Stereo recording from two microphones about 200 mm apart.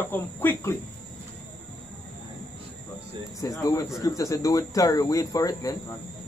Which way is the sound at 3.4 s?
20° left (ahead or behind).